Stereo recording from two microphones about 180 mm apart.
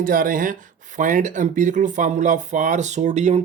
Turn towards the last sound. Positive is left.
turn(degrees=-40)  # may be behind; listen again after turning